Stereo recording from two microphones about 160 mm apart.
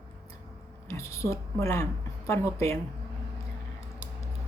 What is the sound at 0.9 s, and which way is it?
A woman's voice, 20° left (ahead or behind).